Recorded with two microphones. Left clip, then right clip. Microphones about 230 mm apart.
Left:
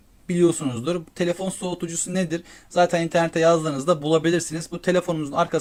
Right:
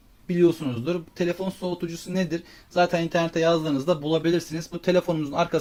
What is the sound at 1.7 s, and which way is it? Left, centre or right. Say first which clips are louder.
Speech: left 2 dB; centre.